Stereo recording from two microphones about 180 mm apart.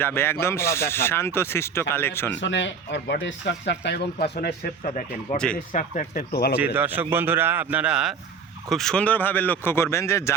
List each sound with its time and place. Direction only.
0.0 s speech: 15° left (ahead or behind)
2.3 s speech: 90° left; by 6.5 s 55° left (ahead or behind)
6.7 s speech: 10° right (ahead or behind); by 10.3 s 15° left (ahead or behind)